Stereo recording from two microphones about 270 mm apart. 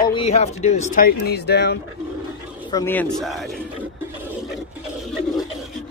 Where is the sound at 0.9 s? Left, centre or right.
Left.